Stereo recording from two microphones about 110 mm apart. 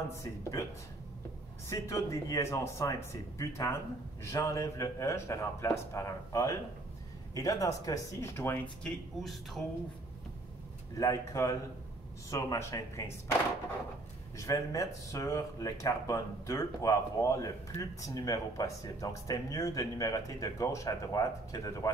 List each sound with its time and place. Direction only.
0.2 s speech: 30° left (ahead or behind)
1.7 s speech: 30° left (ahead or behind)
8.8 s speech: centre (ahead or behind)
11.0 s speech: 30° left (ahead or behind)
14.3 s speech: 30° left (ahead or behind)